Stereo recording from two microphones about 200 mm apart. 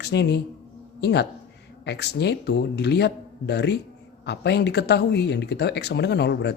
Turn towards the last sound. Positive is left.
turn(degrees=60)  # may be behind; listen again after turning